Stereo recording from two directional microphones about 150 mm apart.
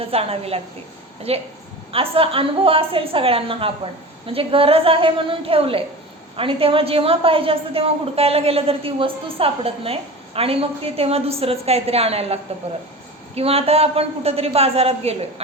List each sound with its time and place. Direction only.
0.0 s a woman's voice: 40° right (ahead or behind)